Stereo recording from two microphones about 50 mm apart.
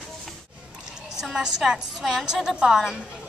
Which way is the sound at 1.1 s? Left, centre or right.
Centre.